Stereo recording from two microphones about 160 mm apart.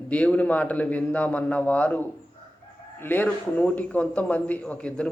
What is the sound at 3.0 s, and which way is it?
A man's voice, 10° left (ahead or behind).